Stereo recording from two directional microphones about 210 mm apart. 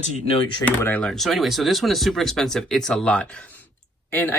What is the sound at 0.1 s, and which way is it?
Speech, 30° left (ahead or behind).